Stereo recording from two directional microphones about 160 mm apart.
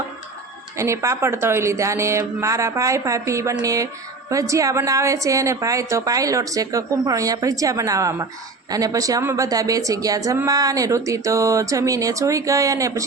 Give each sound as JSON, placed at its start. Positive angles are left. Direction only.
{"t": 0.8, "sound": "a woman's voice", "side_deg": -20}